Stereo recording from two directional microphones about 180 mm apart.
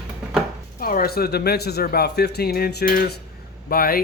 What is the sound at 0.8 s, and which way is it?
Speech, 55° left (ahead or behind).